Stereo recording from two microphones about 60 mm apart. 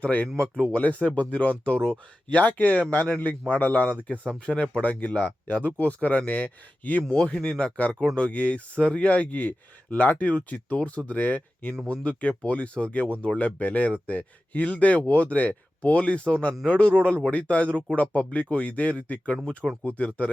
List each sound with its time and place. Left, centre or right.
0.0 s speech: left
0.3 s speech: centre
0.7 s speech: left
7.0 s speech: centre
7.6 s speech: left